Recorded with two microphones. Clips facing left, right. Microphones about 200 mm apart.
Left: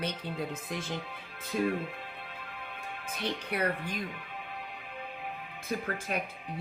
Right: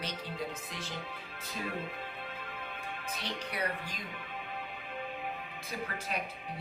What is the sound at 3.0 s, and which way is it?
Speech, 55° left (ahead or behind).